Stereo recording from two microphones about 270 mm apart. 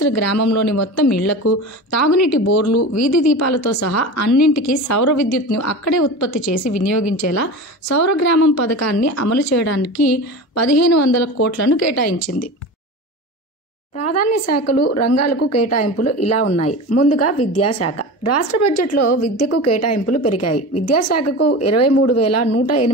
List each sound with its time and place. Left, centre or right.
0.0 s a woman's voice: left
13.9 s speech: left